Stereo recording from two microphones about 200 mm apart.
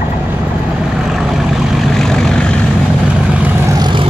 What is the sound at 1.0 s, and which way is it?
Vehicle, centre (ahead or behind).